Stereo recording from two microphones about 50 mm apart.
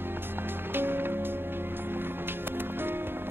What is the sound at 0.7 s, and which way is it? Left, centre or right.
Music, right.